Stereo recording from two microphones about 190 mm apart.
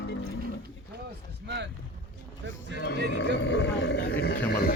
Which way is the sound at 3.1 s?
70° left (ahead or behind).